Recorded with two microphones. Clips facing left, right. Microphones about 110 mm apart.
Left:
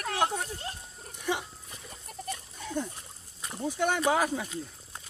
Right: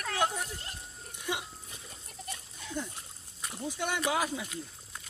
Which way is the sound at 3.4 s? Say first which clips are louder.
Left 6 dB; 45° left (ahead or behind).